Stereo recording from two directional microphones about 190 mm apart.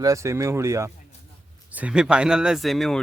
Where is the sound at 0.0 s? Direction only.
15° right (ahead or behind).